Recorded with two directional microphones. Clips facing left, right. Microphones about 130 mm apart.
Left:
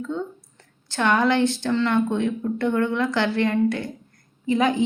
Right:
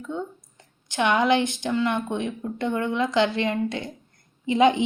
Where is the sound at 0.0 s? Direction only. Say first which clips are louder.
Left 3 dB; 15° right (ahead or behind).